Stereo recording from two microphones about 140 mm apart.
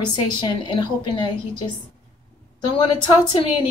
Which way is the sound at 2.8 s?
35° left (ahead or behind).